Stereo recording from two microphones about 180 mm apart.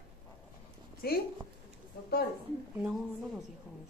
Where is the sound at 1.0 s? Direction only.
60° left (ahead or behind).